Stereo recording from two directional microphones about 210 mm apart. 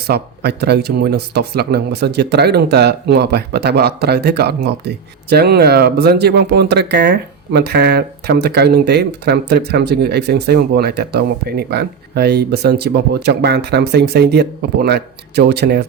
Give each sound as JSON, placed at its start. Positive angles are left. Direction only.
{"t": 0.1, "sound": "speech", "side_deg": -50}